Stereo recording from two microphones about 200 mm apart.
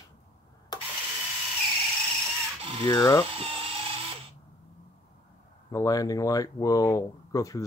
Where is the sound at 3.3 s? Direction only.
25° right (ahead or behind).